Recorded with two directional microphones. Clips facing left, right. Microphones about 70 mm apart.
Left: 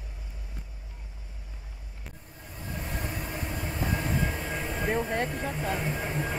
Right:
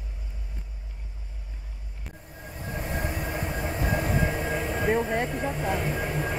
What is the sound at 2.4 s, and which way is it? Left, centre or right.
Train, right.